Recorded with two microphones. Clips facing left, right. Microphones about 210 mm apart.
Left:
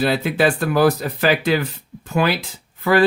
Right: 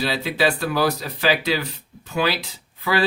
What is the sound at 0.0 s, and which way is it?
Speech, 50° left (ahead or behind).